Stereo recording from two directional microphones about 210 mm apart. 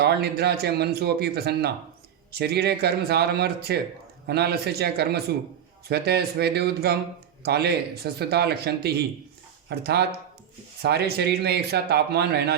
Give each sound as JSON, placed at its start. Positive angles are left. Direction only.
{"t": 0.0, "sound": "a man's voice", "side_deg": -50}